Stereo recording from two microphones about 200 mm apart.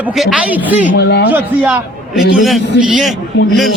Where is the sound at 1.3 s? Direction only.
5° right (ahead or behind).